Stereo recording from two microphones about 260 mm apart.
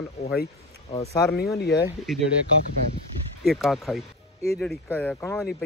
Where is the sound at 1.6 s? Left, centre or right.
Left.